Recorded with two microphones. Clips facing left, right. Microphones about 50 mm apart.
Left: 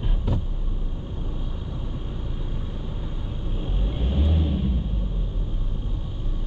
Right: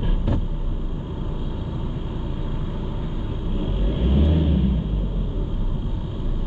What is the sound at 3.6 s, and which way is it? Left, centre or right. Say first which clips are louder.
Vehicle: right 6 dB; right.